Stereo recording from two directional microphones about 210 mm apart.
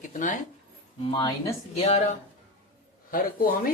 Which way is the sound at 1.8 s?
30° left (ahead or behind).